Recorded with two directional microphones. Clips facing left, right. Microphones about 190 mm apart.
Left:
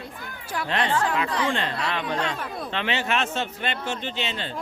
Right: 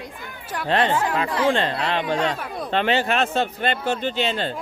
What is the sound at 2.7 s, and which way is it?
Speech, 40° right (ahead or behind).